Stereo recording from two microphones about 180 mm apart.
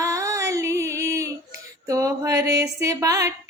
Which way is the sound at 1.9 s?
15° right (ahead or behind).